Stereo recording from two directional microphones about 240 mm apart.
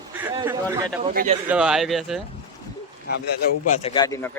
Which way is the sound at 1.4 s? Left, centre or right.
Centre.